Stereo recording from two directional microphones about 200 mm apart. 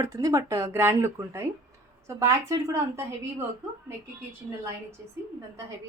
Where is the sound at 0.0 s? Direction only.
15° right (ahead or behind).